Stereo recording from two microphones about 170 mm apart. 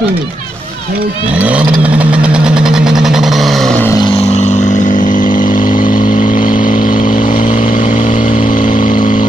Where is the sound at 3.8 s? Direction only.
25° left (ahead or behind).